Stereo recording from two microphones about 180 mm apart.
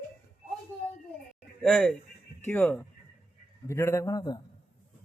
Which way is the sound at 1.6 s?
5° left (ahead or behind).